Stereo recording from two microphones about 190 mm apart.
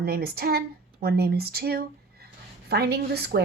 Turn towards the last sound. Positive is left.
turn(degrees=-55)  # may be behind; listen again after turning